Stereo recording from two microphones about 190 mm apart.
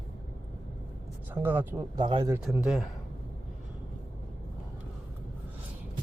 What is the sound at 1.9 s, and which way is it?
Speech, 25° right (ahead or behind).